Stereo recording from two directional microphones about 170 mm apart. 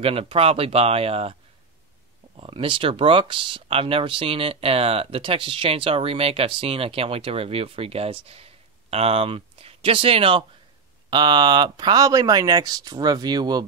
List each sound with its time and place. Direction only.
0.0 s speech: 35° right (ahead or behind)
2.3 s speech: 30° right (ahead or behind)